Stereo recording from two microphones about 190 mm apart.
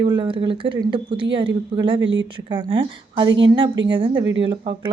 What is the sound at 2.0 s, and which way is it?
Speech, 80° right.